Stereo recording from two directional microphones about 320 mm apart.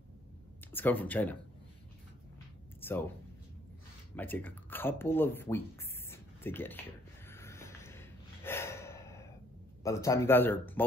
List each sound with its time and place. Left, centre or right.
0.7 s speech: centre
2.8 s speech: centre
4.2 s speech: centre
6.0 s a sound: centre
9.8 s speech: centre